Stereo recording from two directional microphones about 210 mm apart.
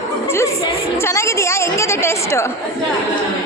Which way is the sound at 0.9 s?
10° left (ahead or behind).